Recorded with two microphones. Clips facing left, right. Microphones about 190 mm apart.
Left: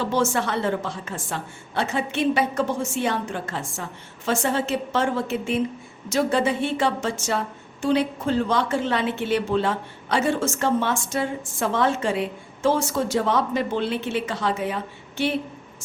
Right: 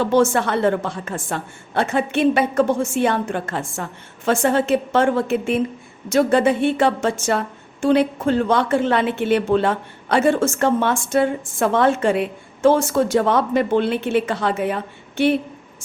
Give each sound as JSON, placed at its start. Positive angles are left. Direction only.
{"t": 0.0, "sound": "a woman's voice", "side_deg": -55}